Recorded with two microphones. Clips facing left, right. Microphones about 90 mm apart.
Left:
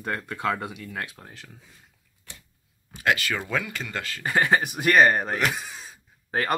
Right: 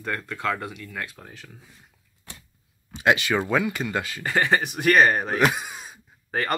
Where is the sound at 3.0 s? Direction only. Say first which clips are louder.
Right 4 dB; 20° right (ahead or behind).